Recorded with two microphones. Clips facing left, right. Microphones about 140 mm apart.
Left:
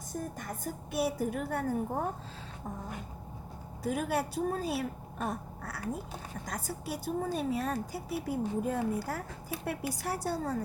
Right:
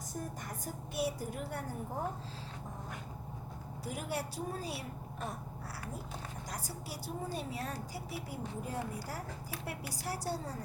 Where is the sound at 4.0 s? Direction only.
60° left (ahead or behind).